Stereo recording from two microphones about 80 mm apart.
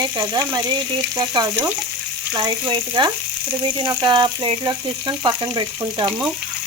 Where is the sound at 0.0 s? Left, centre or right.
Right.